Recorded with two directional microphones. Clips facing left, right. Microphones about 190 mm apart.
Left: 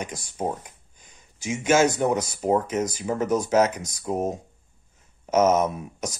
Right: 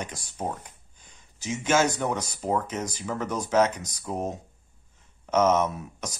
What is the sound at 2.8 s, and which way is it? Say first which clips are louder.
Speech: left 6 dB; 45° left (ahead or behind).